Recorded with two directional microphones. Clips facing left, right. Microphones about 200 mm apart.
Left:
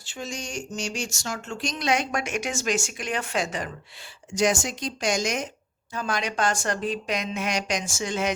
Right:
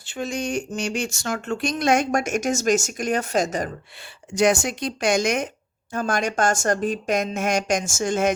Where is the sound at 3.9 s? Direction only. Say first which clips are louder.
Right 2 dB; 60° right (ahead or behind).